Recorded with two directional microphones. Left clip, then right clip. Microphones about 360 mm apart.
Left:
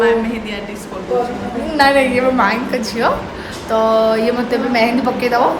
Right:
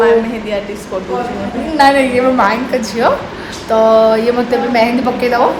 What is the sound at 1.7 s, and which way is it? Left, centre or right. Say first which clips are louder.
A woman's voice: right 3 dB; centre.